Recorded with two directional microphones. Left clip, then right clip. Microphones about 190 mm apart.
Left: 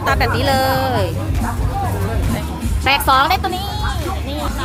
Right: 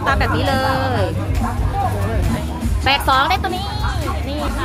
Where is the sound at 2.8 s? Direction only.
15° left (ahead or behind).